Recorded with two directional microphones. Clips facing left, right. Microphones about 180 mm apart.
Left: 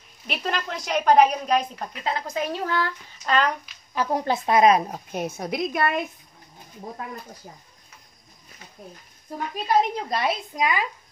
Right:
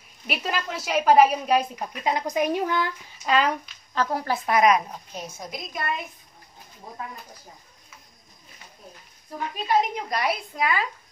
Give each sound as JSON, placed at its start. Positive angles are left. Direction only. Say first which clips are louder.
{"t": 0.3, "sound": "a woman's voice", "louder": "even", "side_deg": -5}
{"t": 3.9, "sound": "speech", "louder": "left 2 dB", "side_deg": 15}
{"t": 4.9, "sound": "a woman's voice", "louder": "left 7 dB", "side_deg": 60}
{"t": 9.9, "sound": "speech", "louder": "left 1 dB", "side_deg": 25}